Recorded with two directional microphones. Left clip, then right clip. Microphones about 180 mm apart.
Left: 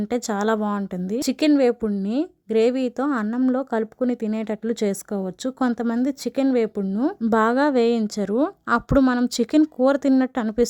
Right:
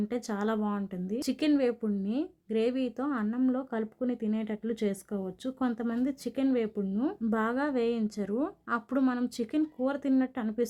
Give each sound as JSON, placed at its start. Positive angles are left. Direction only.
{"t": 0.1, "sound": "a woman's voice", "side_deg": 50}